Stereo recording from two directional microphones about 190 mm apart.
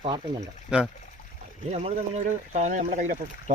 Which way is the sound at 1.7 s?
35° right (ahead or behind).